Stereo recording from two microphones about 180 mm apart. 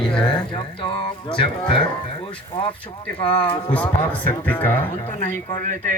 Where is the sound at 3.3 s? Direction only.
30° left (ahead or behind).